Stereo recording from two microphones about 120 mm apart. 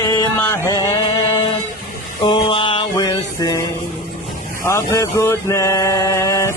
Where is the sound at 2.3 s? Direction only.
45° left (ahead or behind).